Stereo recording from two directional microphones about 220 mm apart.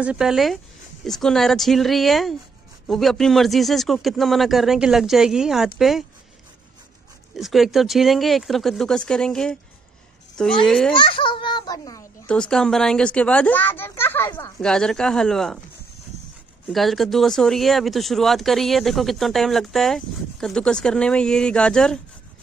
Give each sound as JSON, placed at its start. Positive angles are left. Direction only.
{"t": 0.0, "sound": "speech", "side_deg": -5}
{"t": 7.3, "sound": "speech", "side_deg": 0}
{"t": 10.9, "sound": "a child's voice", "side_deg": 20}
{"t": 12.3, "sound": "speech", "side_deg": 5}
{"t": 16.7, "sound": "speech", "side_deg": 0}